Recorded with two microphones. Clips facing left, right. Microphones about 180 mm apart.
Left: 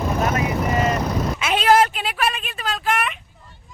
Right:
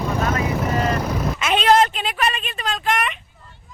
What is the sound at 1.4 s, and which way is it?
A woman's voice, 5° left (ahead or behind).